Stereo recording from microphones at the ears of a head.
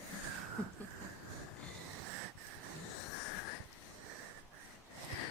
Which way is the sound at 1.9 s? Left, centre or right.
Right.